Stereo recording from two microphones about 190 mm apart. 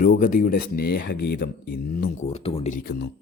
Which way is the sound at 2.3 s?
30° left (ahead or behind).